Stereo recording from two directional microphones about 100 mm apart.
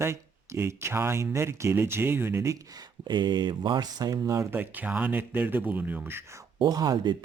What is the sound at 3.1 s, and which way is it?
Speech, 50° right (ahead or behind).